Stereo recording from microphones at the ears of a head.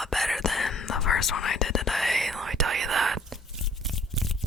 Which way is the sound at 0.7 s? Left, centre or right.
Left.